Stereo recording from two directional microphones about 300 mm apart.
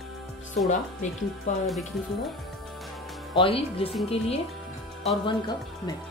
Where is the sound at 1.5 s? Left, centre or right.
Left.